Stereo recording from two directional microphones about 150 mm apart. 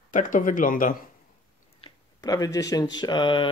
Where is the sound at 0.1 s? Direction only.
60° left (ahead or behind).